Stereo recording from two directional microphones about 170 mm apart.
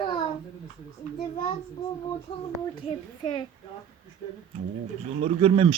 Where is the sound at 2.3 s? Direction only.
35° left (ahead or behind).